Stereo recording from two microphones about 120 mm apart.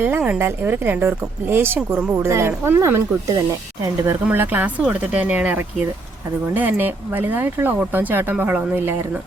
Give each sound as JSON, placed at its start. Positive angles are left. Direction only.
{"t": 0.3, "sound": "speech", "side_deg": -20}